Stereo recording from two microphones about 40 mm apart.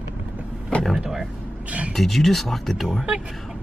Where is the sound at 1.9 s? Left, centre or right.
Centre.